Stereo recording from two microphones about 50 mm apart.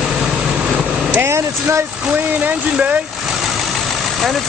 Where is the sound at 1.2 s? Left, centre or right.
Right.